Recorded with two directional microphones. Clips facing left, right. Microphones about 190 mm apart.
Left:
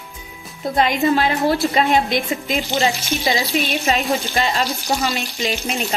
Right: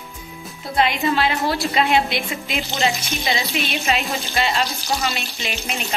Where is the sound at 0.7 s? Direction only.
45° left (ahead or behind).